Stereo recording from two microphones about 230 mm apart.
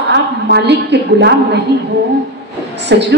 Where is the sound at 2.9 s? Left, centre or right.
Right.